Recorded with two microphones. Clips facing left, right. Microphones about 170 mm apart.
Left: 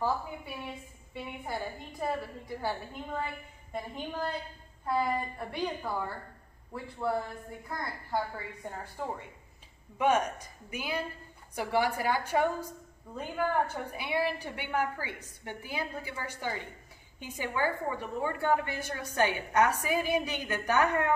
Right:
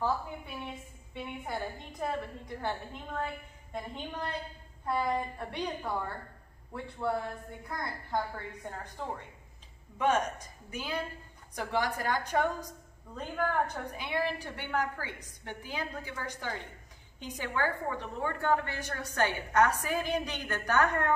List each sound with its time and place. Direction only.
1.1 s a woman's voice: 5° left (ahead or behind)
7.6 s a woman's voice: 5° left (ahead or behind)